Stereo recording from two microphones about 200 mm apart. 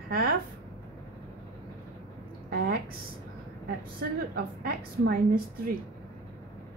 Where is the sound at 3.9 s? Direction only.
50° right (ahead or behind).